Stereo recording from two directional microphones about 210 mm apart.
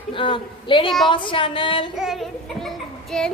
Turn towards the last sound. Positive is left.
turn(degrees=0)  # may be behind; listen again after turning